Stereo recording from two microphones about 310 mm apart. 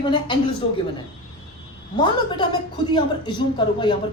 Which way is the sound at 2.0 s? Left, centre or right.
Centre.